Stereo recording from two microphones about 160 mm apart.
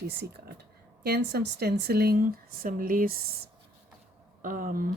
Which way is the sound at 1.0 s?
90° right.